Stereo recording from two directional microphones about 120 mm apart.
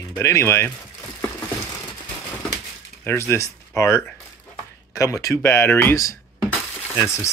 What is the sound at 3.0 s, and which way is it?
Speech, 20° left (ahead or behind).